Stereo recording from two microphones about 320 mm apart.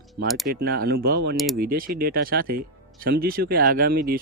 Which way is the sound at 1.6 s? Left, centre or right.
Right.